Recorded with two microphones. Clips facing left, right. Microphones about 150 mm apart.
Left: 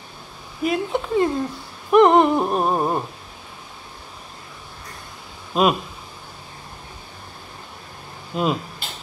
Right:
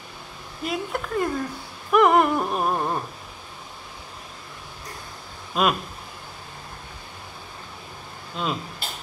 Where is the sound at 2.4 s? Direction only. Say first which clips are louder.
Left 4 dB; 35° left (ahead or behind).